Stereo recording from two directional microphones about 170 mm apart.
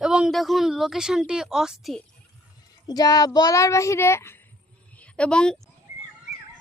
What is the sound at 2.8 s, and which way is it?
A child's voice, 20° left (ahead or behind).